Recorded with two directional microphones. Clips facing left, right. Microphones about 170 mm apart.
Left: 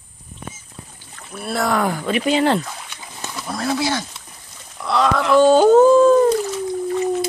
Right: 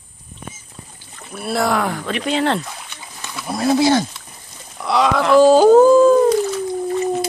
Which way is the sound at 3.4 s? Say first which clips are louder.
Right 5 dB; 15° right (ahead or behind).